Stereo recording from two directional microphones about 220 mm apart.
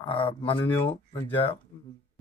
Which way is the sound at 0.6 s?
10° left (ahead or behind).